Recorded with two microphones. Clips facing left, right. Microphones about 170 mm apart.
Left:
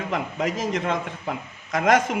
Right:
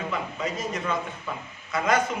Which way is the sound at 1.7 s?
90° left.